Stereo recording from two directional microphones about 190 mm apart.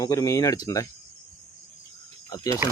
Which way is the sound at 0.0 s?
20° left (ahead or behind).